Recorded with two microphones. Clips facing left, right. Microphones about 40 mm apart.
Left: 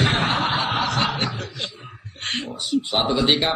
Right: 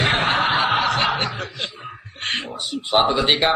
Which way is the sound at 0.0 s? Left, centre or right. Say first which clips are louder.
Right 2 dB; centre.